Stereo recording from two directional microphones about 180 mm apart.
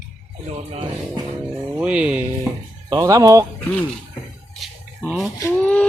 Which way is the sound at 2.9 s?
20° right (ahead or behind).